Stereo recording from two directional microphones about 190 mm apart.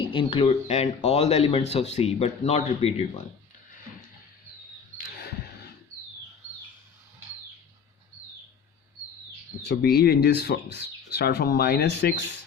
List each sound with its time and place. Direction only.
0.0 s speech: 25° left (ahead or behind)
9.6 s speech: 55° left (ahead or behind)